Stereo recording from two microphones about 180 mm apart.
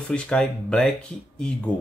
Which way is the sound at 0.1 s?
5° left (ahead or behind).